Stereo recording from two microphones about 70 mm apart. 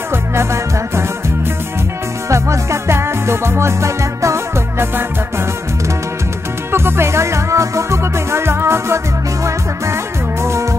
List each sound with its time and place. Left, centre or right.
0.1 s music: right
2.2 s music: right
6.7 s music: right